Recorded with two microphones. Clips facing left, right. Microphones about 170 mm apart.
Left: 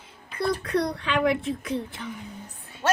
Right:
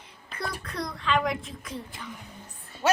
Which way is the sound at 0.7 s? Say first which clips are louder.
Even; 65° left (ahead or behind).